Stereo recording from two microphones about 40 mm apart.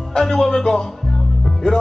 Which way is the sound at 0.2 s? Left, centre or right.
Centre.